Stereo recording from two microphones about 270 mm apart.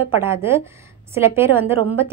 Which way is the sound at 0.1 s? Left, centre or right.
Centre.